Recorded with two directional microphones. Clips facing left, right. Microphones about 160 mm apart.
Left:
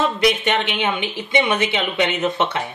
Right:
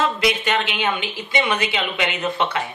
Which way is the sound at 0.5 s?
20° left (ahead or behind).